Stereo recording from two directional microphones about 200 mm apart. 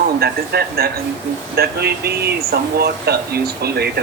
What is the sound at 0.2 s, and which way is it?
Speech, 50° right (ahead or behind).